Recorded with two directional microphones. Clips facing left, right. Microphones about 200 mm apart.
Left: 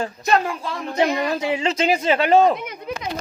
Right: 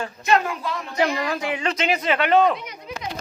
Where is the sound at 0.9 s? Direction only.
20° left (ahead or behind).